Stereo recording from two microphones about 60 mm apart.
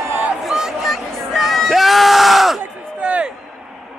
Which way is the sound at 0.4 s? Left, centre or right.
Centre.